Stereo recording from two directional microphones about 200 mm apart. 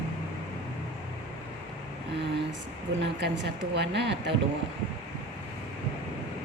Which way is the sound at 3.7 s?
60° right (ahead or behind).